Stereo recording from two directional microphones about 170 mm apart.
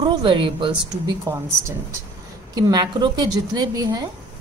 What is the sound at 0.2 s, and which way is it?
Speech, 30° right (ahead or behind).